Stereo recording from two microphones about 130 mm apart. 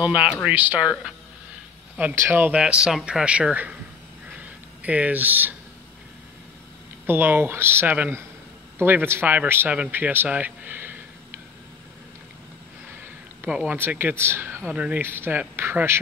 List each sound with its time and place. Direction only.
0.0 s a man's voice: 10° right (ahead or behind)
4.3 s a sound: 10° right (ahead or behind)
7.1 s a man's voice: 15° right (ahead or behind)
13.4 s a man's voice: 10° right (ahead or behind)